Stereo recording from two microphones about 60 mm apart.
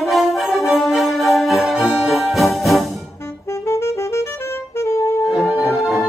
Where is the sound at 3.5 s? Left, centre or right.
Left.